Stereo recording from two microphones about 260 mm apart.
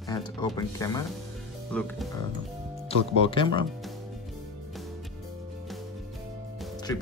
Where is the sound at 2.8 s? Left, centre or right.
Centre.